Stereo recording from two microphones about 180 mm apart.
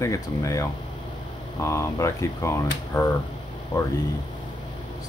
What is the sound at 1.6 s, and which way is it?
Speech, 15° left (ahead or behind).